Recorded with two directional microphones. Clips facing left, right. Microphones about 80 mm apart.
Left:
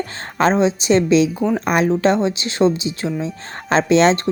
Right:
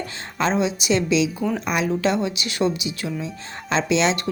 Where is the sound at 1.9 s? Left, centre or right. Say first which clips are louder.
Left 5 dB; left.